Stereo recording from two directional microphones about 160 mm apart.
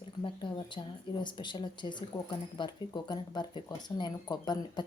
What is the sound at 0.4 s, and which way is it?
Speech, 30° left (ahead or behind).